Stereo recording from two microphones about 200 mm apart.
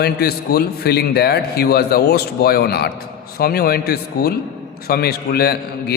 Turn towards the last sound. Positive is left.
turn(degrees=50)  # may be behind; listen again after turning